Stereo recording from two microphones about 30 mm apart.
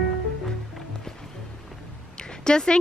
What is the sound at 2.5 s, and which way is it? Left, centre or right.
Speech, left.